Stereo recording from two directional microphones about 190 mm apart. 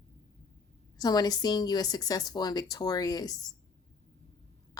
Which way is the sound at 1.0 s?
20° left (ahead or behind).